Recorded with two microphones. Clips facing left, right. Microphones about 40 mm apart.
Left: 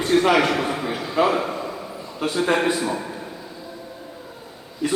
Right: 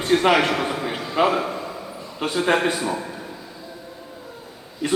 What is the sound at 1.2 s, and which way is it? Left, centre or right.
Speech, right.